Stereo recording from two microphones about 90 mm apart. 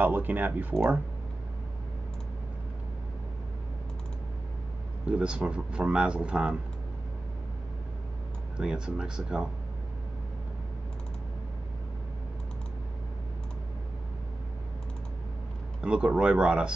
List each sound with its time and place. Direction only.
0.0 s speech: 20° right (ahead or behind)
5.0 s speech: 10° right (ahead or behind)
8.5 s speech: 10° right (ahead or behind)
15.8 s speech: 10° right (ahead or behind)